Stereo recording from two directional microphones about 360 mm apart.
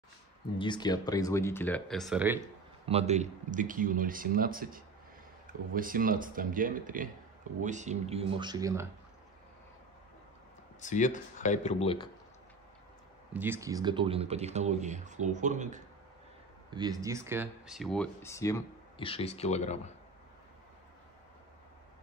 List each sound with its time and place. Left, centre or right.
0.6 s speech: centre
2.9 s speech: centre
10.8 s speech: left
13.3 s speech: centre